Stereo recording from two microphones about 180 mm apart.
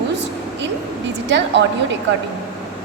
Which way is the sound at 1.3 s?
80° right.